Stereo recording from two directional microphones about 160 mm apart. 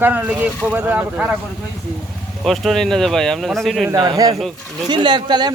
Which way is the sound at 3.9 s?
25° right (ahead or behind).